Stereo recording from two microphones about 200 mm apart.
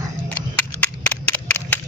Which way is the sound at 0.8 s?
10° left (ahead or behind).